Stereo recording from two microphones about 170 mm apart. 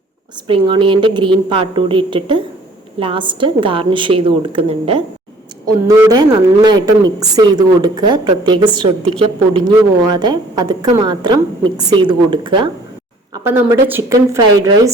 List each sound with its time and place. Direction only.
0.4 s a woman's voice: 30° right (ahead or behind)
5.6 s a woman's voice: 20° right (ahead or behind)
13.3 s speech: 15° right (ahead or behind)